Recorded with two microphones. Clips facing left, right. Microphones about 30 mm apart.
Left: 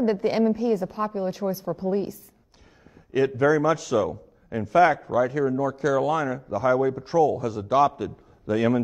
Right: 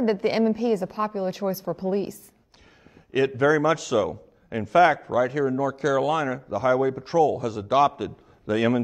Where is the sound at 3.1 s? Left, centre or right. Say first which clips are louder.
Even; right.